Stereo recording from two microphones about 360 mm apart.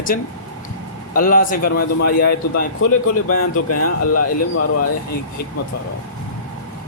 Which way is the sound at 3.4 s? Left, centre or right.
Left.